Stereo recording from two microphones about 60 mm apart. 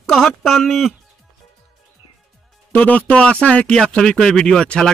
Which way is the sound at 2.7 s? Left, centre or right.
Left.